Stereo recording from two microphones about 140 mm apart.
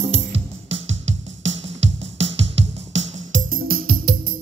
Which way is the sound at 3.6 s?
90° right.